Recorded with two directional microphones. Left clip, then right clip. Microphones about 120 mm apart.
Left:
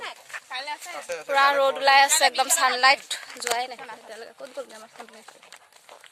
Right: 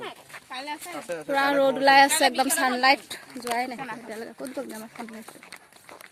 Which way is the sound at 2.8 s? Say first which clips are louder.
Left 2 dB; 10° right (ahead or behind).